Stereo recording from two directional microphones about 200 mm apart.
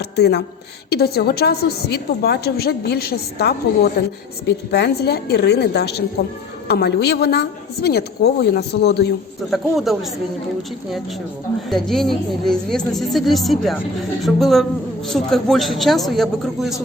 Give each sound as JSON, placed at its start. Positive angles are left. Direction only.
{"t": 0.0, "sound": "a woman's voice", "side_deg": 55}
{"t": 9.5, "sound": "speech", "side_deg": 0}
{"t": 11.7, "sound": "speech", "side_deg": 0}